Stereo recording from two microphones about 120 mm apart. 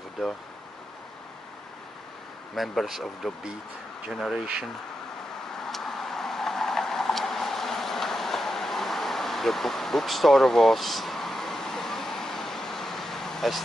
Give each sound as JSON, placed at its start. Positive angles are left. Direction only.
{"t": 2.5, "sound": "speech", "side_deg": 0}
{"t": 5.6, "sound": "vehicle", "side_deg": 5}